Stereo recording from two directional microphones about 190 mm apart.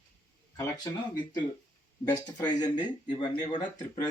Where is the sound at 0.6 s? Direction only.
20° left (ahead or behind).